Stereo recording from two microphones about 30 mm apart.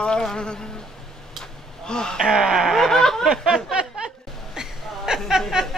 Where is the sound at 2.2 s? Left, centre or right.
Centre.